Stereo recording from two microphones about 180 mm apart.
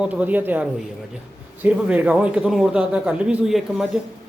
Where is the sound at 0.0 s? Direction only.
10° right (ahead or behind).